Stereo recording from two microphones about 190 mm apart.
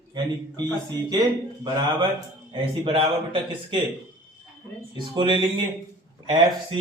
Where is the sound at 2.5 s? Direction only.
25° right (ahead or behind).